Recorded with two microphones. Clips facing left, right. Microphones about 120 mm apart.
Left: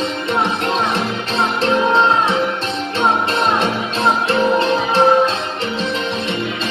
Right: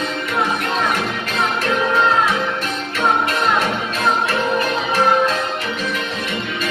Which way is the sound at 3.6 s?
25° left (ahead or behind).